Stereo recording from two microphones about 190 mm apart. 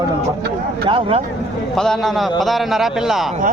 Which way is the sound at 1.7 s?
Centre (ahead or behind).